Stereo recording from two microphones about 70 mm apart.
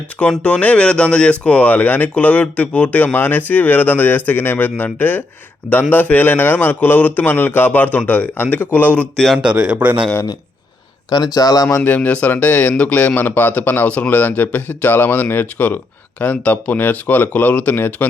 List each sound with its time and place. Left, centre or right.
0.2 s speech: centre
9.1 s speech: centre
9.4 s speech: centre
11.1 s speech: left
11.8 s speech: left